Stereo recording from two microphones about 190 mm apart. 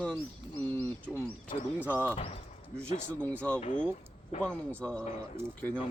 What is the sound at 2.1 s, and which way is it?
Speech, 30° left (ahead or behind).